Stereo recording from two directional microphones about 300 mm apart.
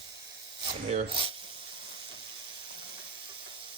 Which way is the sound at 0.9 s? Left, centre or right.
Centre.